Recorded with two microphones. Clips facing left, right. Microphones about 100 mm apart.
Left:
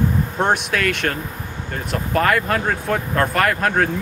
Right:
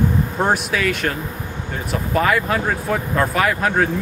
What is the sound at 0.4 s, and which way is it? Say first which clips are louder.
Speech: left 1 dB; 5° right (ahead or behind).